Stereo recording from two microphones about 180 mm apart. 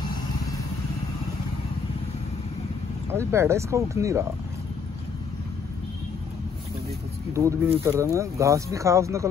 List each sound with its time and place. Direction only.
3.1 s speech: 15° right (ahead or behind)
7.3 s speech: 15° right (ahead or behind)